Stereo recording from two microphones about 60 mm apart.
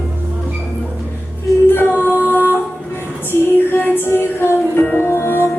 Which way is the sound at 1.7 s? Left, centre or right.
Left.